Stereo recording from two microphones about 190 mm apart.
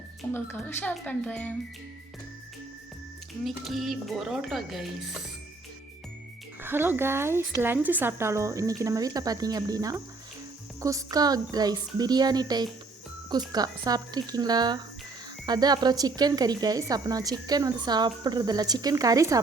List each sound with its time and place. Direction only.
0.3 s speech: 10° left (ahead or behind)
3.4 s speech: centre (ahead or behind)
6.6 s speech: 10° right (ahead or behind)